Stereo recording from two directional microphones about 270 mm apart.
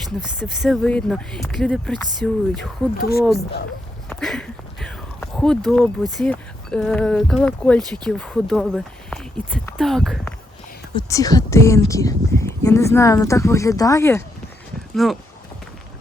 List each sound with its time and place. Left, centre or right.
0.3 s speech: centre
3.0 s speech: left
4.1 s speech: centre
10.9 s speech: centre